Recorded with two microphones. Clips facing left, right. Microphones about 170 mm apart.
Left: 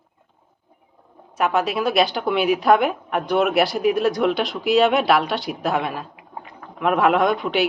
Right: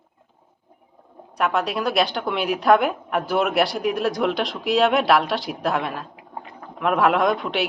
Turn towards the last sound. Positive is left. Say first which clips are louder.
# left 2 dB
turn(degrees=0)  # may be behind; listen again after turning